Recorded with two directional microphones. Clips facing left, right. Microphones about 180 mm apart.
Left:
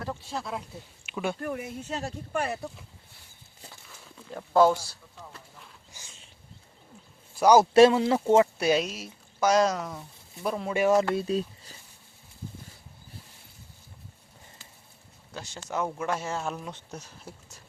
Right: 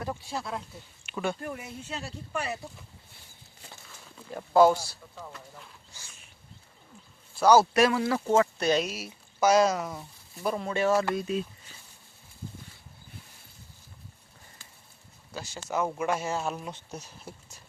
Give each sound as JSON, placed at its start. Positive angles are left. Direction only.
{"t": 0.0, "sound": "speech", "side_deg": -10}
{"t": 1.4, "sound": "speech", "side_deg": 55}
{"t": 4.3, "sound": "speech", "side_deg": -10}
{"t": 5.9, "sound": "a sound", "side_deg": 15}
{"t": 7.3, "sound": "a man's voice", "side_deg": 15}
{"t": 7.7, "sound": "speech", "side_deg": 25}
{"t": 8.5, "sound": "a man's voice", "side_deg": 10}
{"t": 8.9, "sound": "speech", "side_deg": -5}
{"t": 10.8, "sound": "a man's voice", "side_deg": 15}
{"t": 11.1, "sound": "speech", "side_deg": 30}
{"t": 15.3, "sound": "speech", "side_deg": -5}